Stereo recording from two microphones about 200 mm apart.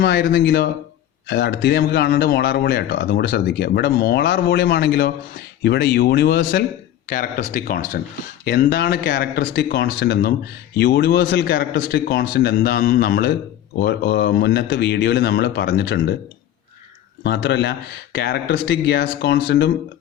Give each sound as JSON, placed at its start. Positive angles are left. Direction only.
{"t": 0.0, "sound": "a man's voice", "side_deg": 50}
{"t": 17.2, "sound": "speech", "side_deg": 55}